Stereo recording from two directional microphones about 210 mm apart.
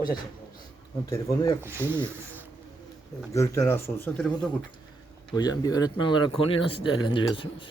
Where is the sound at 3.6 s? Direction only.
10° left (ahead or behind).